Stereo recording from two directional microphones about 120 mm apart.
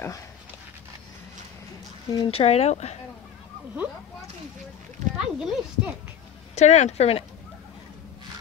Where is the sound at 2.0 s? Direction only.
40° left (ahead or behind).